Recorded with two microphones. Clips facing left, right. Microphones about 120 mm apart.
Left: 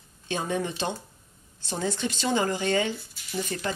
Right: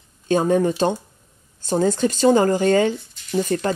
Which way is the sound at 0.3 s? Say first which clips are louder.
Right 11 dB; 45° right (ahead or behind).